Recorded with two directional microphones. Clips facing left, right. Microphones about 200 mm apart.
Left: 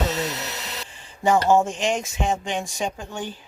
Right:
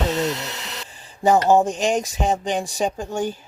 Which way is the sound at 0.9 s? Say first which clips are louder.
Right 3 dB; 40° right (ahead or behind).